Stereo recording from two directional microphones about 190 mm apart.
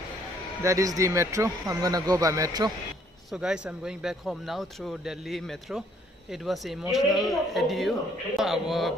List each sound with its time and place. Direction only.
0.6 s speech: 15° right (ahead or behind)
3.3 s speech: 5° right (ahead or behind)